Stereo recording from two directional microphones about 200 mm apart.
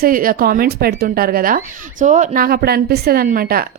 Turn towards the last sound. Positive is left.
turn(degrees=-45)  # may be behind; listen again after turning